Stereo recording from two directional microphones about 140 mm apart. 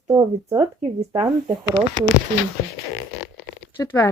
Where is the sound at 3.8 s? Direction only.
20° left (ahead or behind).